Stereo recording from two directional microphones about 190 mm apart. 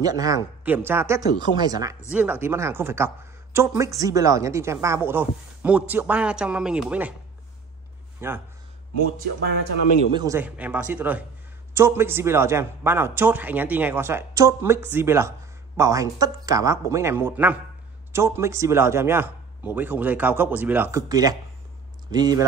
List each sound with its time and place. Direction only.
0.0 s speech: 20° right (ahead or behind)
2.1 s speech: 10° right (ahead or behind)
8.2 s speech: 10° right (ahead or behind)
10.1 s speech: 15° right (ahead or behind)